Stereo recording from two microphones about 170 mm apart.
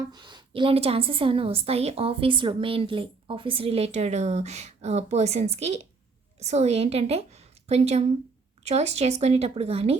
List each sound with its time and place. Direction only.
0.1 s a woman's voice: 25° right (ahead or behind)